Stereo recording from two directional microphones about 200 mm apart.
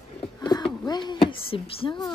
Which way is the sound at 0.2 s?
20° left (ahead or behind).